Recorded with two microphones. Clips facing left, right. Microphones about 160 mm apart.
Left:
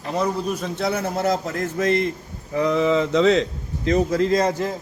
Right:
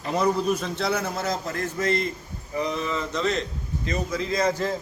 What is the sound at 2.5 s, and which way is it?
Speech, 90° left.